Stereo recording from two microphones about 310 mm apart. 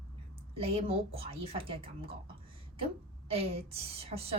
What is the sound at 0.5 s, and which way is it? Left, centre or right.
A woman's voice, centre.